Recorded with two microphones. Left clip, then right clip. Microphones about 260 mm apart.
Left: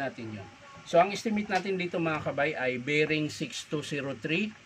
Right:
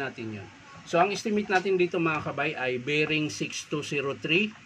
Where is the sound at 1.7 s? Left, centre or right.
Centre.